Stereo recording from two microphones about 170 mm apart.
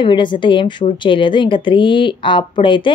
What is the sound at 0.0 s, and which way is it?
A woman's voice, 30° left (ahead or behind).